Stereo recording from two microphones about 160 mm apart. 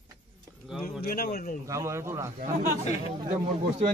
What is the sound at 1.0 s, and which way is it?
Speech, 75° left (ahead or behind).